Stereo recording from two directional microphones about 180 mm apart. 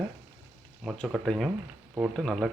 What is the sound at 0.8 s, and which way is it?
Speech, centre (ahead or behind).